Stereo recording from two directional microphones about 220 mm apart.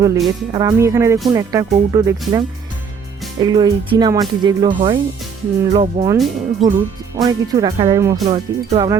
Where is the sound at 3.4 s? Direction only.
20° right (ahead or behind).